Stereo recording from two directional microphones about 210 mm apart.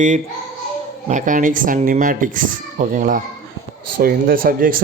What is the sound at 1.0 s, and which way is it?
Speech, 35° right (ahead or behind).